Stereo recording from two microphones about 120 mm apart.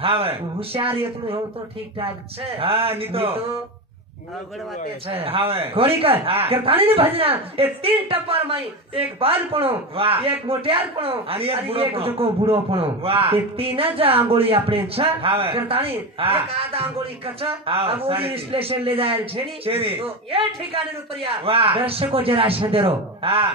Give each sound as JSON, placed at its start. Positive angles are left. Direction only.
{"t": 0.0, "sound": "a man's voice", "side_deg": -50}
{"t": 5.0, "sound": "a man's voice", "side_deg": -50}